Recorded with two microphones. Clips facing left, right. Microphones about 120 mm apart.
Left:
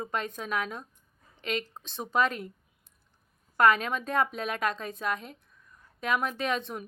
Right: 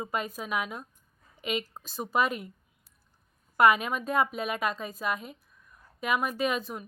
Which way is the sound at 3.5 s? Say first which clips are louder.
Right 1 dB; 10° right (ahead or behind).